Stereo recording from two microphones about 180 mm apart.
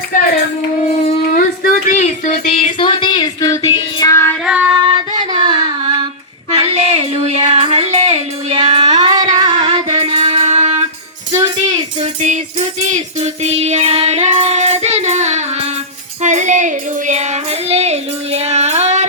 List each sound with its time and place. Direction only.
1.4 s a sound: 50° left (ahead or behind); by 4.4 s 15° left (ahead or behind)
4.4 s female singing: 5° right (ahead or behind)
5.3 s a sound: 25° right (ahead or behind)
6.6 s music: 35° right (ahead or behind)
11.3 s music: 20° right (ahead or behind)
13.1 s child singing: 35° right (ahead or behind)
16.2 s music: 40° right (ahead or behind)